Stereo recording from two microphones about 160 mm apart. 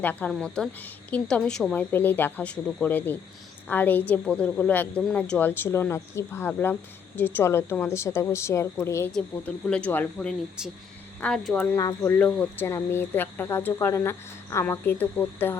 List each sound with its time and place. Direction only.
0.0 s speech: 10° left (ahead or behind)
11.8 s speech: 20° left (ahead or behind)